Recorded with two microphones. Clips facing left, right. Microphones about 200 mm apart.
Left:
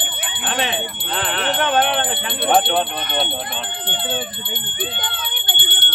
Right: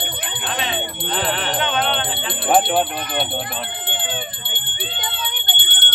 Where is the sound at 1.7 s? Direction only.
55° left (ahead or behind).